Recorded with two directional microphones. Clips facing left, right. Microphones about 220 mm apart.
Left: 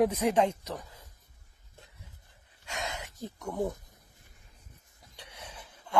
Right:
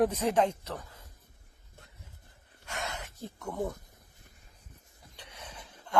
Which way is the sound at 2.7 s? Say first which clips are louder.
Left 1 dB; 15° left (ahead or behind).